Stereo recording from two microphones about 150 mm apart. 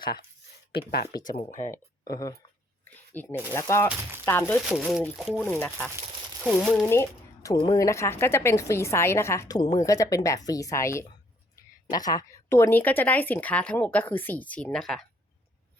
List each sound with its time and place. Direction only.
1.4 s speech: 55° left (ahead or behind)
1.7 s speech: 25° left (ahead or behind)
2.8 s a sound: 10° left (ahead or behind)
3.5 s speech: 20° left (ahead or behind)
4.5 s speech: centre (ahead or behind)
5.4 s speech: 10° left (ahead or behind)
6.8 s speech: 20° left (ahead or behind); by 15.0 s centre (ahead or behind)